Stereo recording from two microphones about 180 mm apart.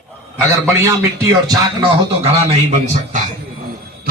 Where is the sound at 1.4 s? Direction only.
20° right (ahead or behind).